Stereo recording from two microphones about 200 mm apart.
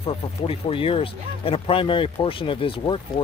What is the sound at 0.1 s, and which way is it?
Speech, 30° left (ahead or behind).